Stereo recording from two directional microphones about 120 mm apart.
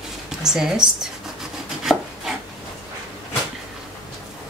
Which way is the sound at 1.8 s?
5° right (ahead or behind).